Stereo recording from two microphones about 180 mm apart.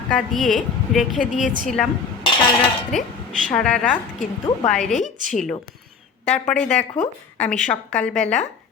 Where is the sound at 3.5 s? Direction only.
5° left (ahead or behind).